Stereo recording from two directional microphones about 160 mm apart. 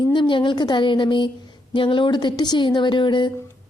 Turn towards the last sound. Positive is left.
turn(degrees=30)  # may be behind; listen again after turning